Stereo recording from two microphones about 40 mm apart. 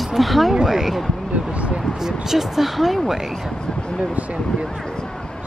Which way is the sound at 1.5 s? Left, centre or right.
Right.